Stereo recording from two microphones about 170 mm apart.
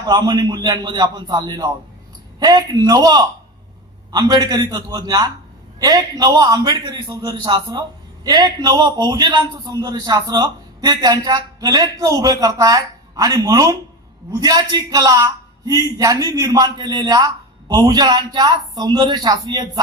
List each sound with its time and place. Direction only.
0.0 s a man's voice: 25° right (ahead or behind)